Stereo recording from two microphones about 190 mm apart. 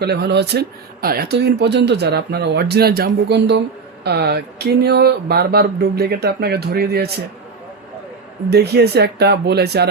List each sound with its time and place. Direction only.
0.0 s speech: 60° right (ahead or behind)
8.4 s speech: 60° right (ahead or behind)